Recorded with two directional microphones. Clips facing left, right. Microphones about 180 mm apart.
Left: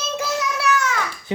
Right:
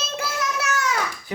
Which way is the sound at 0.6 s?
45° right (ahead or behind).